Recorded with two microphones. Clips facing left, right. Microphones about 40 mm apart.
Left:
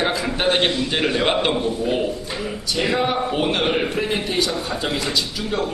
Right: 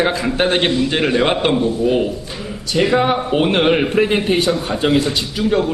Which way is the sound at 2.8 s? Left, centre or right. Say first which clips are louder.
Right 5 dB; centre.